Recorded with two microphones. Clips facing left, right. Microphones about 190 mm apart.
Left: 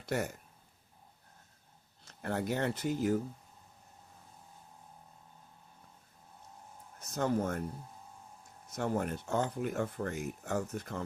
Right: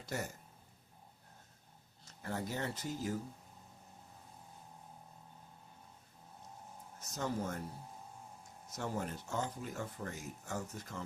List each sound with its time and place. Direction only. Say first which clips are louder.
0.0 s speech: left 7 dB; 65° left (ahead or behind)
2.0 s speech: left 6 dB; 65° left (ahead or behind)
7.1 s speech: left 7 dB; 55° left (ahead or behind)
8.7 s speech: left 6 dB; 55° left (ahead or behind)